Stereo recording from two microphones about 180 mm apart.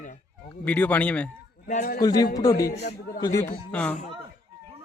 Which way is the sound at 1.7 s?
50° left (ahead or behind).